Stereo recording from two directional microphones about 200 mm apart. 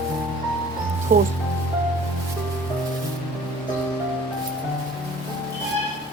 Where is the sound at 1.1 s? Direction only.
45° right (ahead or behind).